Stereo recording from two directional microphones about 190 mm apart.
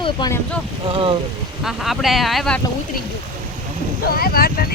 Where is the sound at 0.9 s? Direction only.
30° right (ahead or behind).